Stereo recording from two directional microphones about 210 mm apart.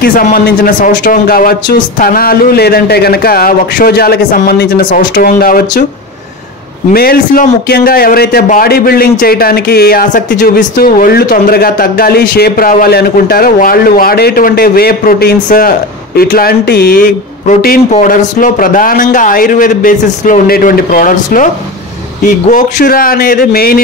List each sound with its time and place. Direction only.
0.0 s a man's voice: 40° left (ahead or behind)
6.9 s a man's voice: 45° left (ahead or behind)